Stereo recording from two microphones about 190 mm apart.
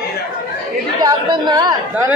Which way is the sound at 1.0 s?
20° right (ahead or behind).